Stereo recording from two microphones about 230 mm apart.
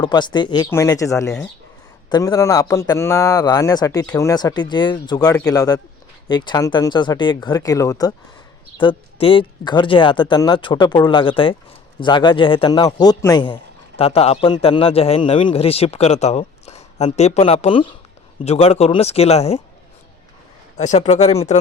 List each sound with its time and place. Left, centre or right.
0.0 s a man's voice: centre
20.7 s a man's voice: left